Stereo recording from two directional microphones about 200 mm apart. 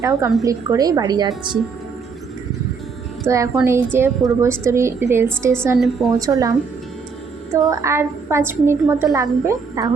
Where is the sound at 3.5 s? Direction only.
10° right (ahead or behind).